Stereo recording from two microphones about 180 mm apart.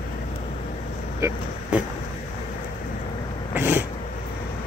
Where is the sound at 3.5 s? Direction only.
10° right (ahead or behind).